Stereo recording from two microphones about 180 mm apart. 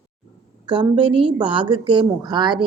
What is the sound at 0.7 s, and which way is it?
A woman's voice, 25° right (ahead or behind).